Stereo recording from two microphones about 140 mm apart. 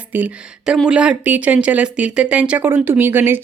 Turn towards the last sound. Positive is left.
turn(degrees=-15)  # may be behind; listen again after turning